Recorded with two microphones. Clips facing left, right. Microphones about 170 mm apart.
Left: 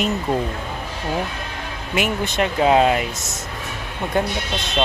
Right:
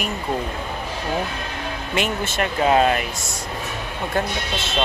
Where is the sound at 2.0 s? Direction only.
15° left (ahead or behind).